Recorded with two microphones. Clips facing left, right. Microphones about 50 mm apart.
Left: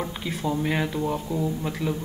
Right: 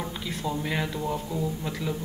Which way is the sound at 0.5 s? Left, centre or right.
Centre.